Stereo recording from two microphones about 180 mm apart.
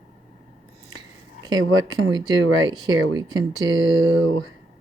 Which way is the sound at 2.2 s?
20° right (ahead or behind).